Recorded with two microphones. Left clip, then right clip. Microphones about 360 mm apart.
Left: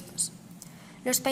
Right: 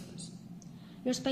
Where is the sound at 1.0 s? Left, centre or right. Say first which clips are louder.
Left 5 dB; centre.